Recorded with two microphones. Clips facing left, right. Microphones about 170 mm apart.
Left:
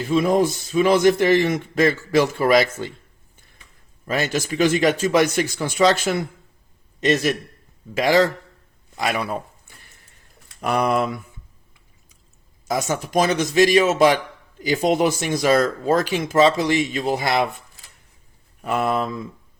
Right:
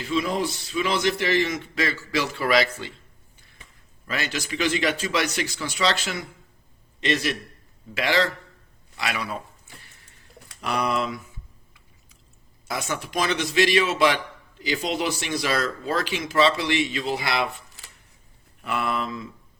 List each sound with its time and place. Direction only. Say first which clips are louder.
0.0 s speech: left 7 dB; 50° left (ahead or behind)
4.0 s speech: left 7 dB; 45° left (ahead or behind)
9.0 s a sound: left 6 dB; 50° left (ahead or behind)
10.6 s speech: left 5 dB; 50° left (ahead or behind)
12.6 s speech: left 6 dB; 40° left (ahead or behind)
18.6 s speech: left 5 dB; 40° left (ahead or behind)